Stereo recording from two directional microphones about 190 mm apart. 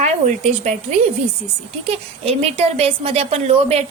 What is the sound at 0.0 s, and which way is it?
A woman's voice, 40° right (ahead or behind).